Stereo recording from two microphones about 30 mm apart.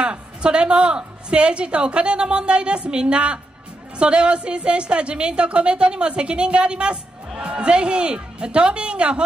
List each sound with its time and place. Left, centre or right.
0.0 s a woman's voice: right